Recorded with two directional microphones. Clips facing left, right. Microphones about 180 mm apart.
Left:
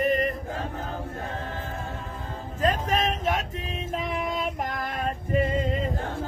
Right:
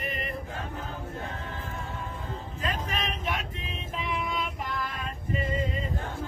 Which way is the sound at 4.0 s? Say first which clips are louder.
Left 1 dB; 45° left (ahead or behind).